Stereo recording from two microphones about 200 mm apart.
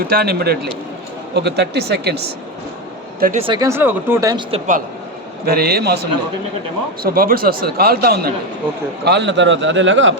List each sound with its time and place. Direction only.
0.1 s speech: 50° right (ahead or behind)
3.2 s speech: 40° right (ahead or behind)
3.4 s speech: 20° right (ahead or behind)
4.5 s a man's voice: 35° right (ahead or behind)
5.5 s speech: 50° right (ahead or behind)
9.0 s a man's voice: 60° right (ahead or behind)